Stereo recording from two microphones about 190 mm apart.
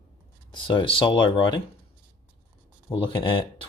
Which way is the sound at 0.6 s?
25° left (ahead or behind).